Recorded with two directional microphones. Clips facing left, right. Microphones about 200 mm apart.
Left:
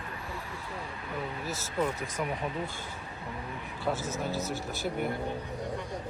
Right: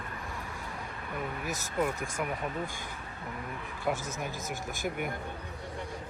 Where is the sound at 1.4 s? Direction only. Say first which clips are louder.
Even; 15° right (ahead or behind).